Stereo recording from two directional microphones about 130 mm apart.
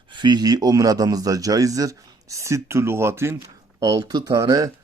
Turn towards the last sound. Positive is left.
turn(degrees=-25)  # may be behind; listen again after turning